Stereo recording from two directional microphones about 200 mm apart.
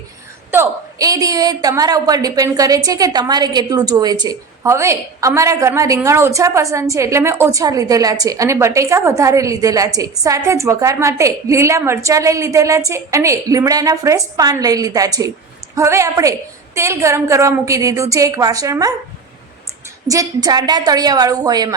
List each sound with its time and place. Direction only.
0.5 s a woman's voice: 15° right (ahead or behind)
20.1 s a woman's voice: 20° right (ahead or behind)